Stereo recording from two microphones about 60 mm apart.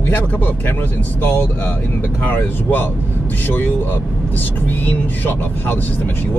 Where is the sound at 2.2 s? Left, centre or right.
Left.